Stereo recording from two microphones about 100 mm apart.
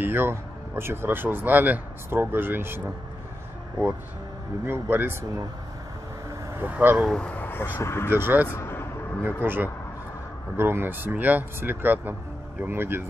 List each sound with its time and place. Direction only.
0.0 s speech: 20° right (ahead or behind)
4.6 s speech: 20° right (ahead or behind)
6.5 s speech: 20° right (ahead or behind)
7.1 s speech: 10° left (ahead or behind)
8.1 s speech: 20° right (ahead or behind)
8.5 s vehicle: 20° left (ahead or behind)
9.2 s speech: 20° right (ahead or behind)